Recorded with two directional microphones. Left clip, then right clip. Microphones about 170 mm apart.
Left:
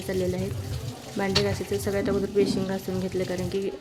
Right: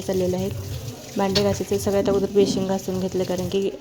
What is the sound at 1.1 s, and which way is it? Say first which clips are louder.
Speech: right 4 dB; 20° right (ahead or behind).